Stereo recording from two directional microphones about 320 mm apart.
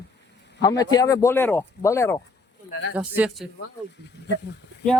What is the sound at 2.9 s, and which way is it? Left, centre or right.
Speech, centre.